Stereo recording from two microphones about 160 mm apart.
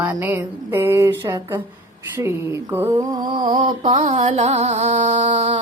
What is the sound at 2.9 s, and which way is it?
Speech, 25° right (ahead or behind).